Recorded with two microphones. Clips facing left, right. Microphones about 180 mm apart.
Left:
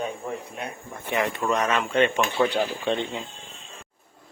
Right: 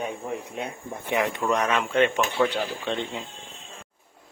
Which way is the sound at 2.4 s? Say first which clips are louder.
Even; 25° left (ahead or behind).